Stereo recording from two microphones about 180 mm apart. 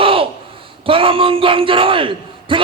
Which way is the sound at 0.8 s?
30° right (ahead or behind).